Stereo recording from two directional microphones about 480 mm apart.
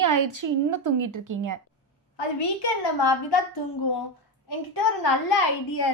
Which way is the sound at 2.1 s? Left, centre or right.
Left.